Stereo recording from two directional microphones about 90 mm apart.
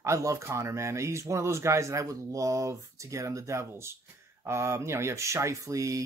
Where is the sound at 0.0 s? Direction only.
35° right (ahead or behind).